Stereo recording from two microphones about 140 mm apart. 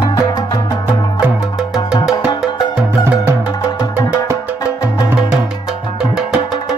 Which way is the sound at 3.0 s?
20° right (ahead or behind).